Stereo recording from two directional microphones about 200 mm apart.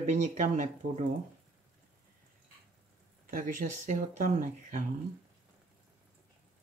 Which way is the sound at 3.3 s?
40° right (ahead or behind).